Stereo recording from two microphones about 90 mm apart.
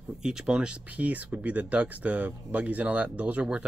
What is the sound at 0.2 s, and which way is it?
Speech, 5° right (ahead or behind).